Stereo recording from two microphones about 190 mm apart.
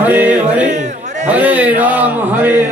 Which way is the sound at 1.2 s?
10° right (ahead or behind).